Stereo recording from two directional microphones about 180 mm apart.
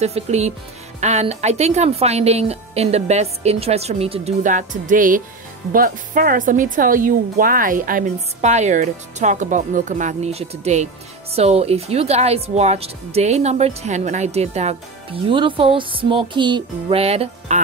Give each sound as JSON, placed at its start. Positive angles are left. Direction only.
{"t": 0.0, "sound": "a woman's voice", "side_deg": -35}